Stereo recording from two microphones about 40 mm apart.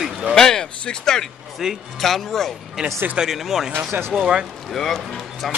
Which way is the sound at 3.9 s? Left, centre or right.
Right.